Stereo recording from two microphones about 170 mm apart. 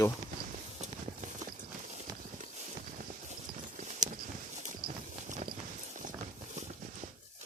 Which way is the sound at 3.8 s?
45° right (ahead or behind).